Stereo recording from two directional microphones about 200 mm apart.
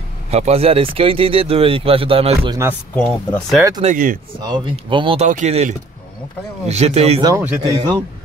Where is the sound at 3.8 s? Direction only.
40° right (ahead or behind).